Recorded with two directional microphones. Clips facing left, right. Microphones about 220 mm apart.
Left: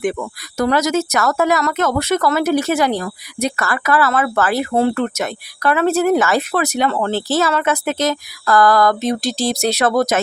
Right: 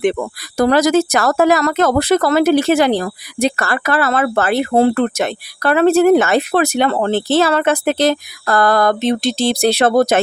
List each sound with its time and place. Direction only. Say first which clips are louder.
0.6 s speech: right 4 dB; 35° right (ahead or behind)